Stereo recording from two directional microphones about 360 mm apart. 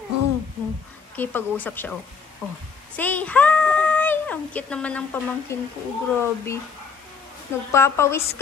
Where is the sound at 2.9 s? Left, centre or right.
Centre.